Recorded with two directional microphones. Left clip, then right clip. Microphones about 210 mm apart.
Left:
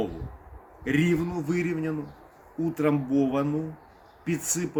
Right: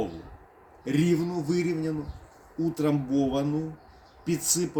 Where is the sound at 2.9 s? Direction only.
25° left (ahead or behind).